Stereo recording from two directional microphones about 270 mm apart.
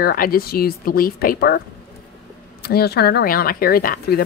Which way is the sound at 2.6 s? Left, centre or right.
Left.